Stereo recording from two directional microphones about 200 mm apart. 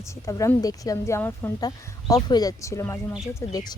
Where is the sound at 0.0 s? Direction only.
15° left (ahead or behind).